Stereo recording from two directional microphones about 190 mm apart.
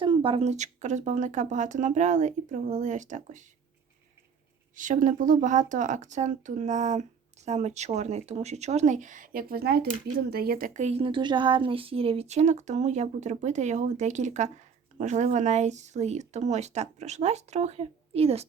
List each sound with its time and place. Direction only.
0.0 s speech: 25° right (ahead or behind)
4.7 s speech: 45° right (ahead or behind)